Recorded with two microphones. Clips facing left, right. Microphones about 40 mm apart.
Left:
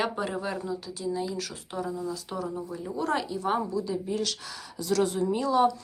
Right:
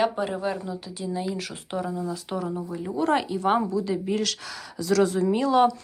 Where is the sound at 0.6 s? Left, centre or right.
Right.